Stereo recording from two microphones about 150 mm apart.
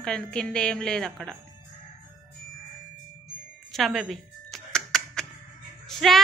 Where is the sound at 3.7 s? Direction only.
Centre (ahead or behind).